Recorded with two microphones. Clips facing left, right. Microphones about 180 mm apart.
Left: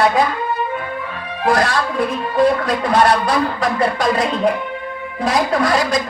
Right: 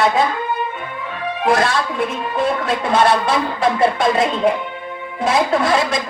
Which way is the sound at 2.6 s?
25° right (ahead or behind).